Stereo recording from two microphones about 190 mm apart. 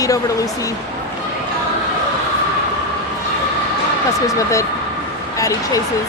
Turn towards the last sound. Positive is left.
turn(degrees=15)  # may be behind; listen again after turning